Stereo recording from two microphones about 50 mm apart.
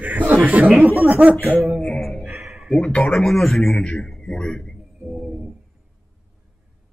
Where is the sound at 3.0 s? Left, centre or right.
Centre.